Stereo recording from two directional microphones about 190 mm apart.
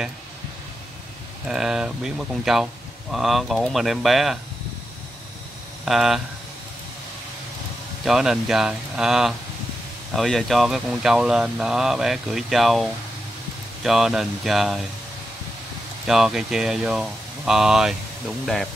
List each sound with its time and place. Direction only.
1.5 s speech: 5° right (ahead or behind)
5.9 s speech: centre (ahead or behind)
8.0 s speech: centre (ahead or behind)
16.1 s speech: 5° right (ahead or behind)